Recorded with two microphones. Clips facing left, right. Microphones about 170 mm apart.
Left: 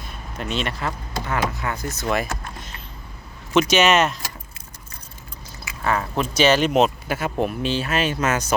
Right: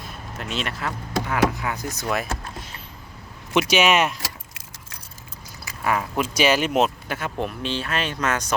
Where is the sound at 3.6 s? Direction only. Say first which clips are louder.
Left 2 dB; 10° right (ahead or behind).